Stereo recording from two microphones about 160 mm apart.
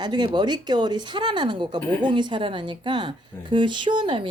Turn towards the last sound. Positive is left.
turn(degrees=-30)  # may be behind; listen again after turning